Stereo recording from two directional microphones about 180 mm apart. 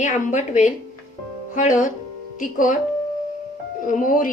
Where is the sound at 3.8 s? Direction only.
50° left (ahead or behind).